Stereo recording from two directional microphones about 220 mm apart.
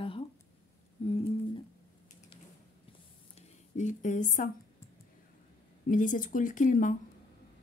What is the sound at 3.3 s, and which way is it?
Speech, 35° left (ahead or behind).